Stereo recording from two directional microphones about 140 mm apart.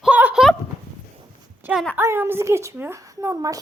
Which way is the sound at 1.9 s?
15° right (ahead or behind).